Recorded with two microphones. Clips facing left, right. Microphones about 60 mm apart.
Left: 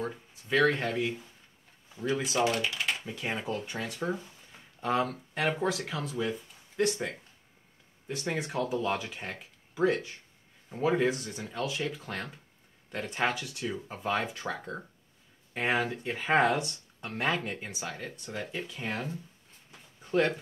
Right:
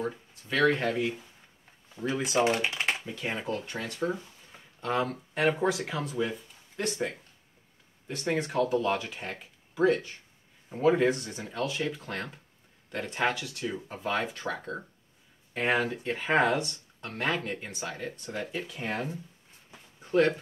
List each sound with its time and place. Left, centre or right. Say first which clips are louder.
0.0 s speech: right 2 dB; centre; by 3.0 s right
3.1 s speech: right 1 dB; centre